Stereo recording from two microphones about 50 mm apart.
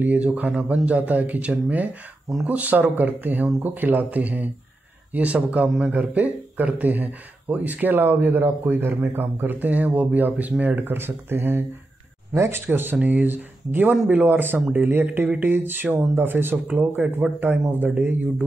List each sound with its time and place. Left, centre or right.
0.0 s speech: right
12.4 s speech: right
12.6 s speech: right
15.2 s speech: right
15.5 s speech: right